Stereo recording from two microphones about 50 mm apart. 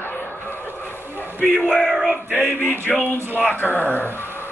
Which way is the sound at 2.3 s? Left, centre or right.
Left.